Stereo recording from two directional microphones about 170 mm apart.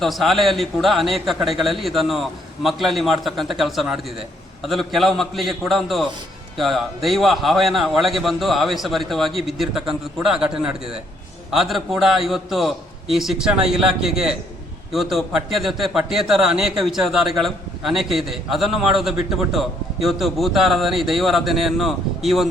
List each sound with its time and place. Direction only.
0.0 s a man's voice: centre (ahead or behind)